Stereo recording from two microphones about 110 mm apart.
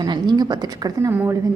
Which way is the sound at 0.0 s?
40° right (ahead or behind).